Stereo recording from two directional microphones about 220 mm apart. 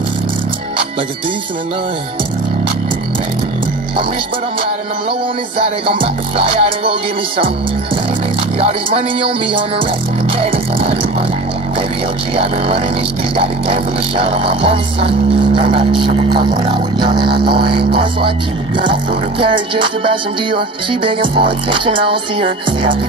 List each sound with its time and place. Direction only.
5.6 s music: 25° right (ahead or behind)
10.3 s music: 25° right (ahead or behind)
12.4 s music: 25° right (ahead or behind)